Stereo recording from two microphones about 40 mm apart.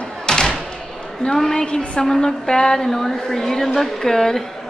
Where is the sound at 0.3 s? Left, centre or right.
Centre.